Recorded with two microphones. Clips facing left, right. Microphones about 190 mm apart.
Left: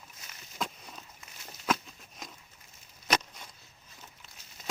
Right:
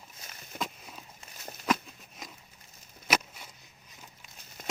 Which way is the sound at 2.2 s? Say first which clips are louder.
Even; centre (ahead or behind).